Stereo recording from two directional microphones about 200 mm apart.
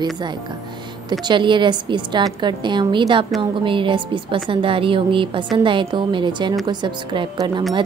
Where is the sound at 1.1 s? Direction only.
20° right (ahead or behind).